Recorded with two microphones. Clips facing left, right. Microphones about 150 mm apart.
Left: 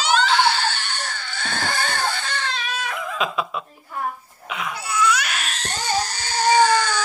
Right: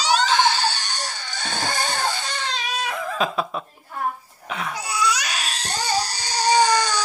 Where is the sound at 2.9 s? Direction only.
40° right (ahead or behind).